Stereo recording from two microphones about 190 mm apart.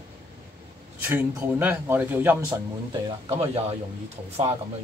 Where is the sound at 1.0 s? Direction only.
10° right (ahead or behind).